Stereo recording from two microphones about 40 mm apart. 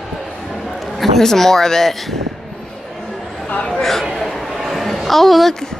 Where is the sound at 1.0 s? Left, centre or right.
Centre.